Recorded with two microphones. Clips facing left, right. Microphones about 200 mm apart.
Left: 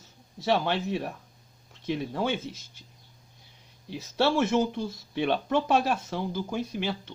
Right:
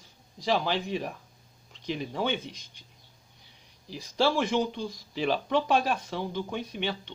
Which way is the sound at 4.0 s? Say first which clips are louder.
Left 1 dB; 5° left (ahead or behind).